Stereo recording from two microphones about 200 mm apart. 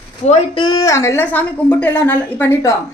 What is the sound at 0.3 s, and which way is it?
A woman's voice, 20° left (ahead or behind).